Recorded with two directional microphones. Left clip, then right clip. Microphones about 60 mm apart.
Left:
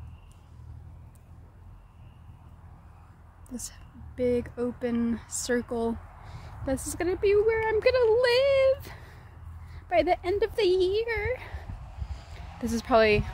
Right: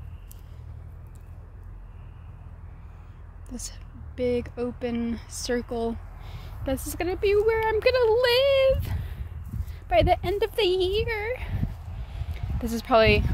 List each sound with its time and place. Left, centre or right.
3.4 s speech: left
6.3 s a sound: centre
6.7 s speech: left
7.4 s speech: centre
7.8 s speech: centre
11.1 s speech: left
12.4 s a sound: centre